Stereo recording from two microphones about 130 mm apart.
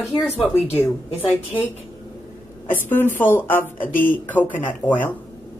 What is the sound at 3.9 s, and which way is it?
Speech, 90° left.